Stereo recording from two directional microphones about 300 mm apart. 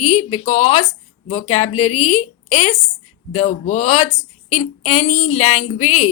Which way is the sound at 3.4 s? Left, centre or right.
Left.